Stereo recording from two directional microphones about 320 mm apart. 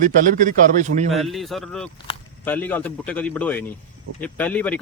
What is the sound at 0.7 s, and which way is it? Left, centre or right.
Speech, right.